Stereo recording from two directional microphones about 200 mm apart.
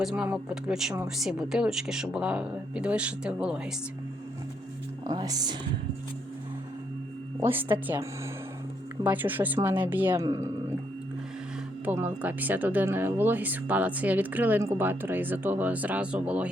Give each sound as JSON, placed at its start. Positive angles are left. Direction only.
{"t": 0.0, "sound": "speech", "side_deg": -5}
{"t": 5.0, "sound": "speech", "side_deg": -20}
{"t": 7.4, "sound": "a woman's voice", "side_deg": -10}
{"t": 9.0, "sound": "a woman's voice", "side_deg": -10}
{"t": 11.9, "sound": "a woman's voice", "side_deg": -10}